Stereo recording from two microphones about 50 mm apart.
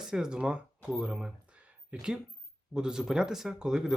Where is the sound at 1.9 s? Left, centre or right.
Right.